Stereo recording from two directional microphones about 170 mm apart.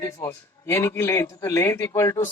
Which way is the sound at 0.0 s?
15° left (ahead or behind).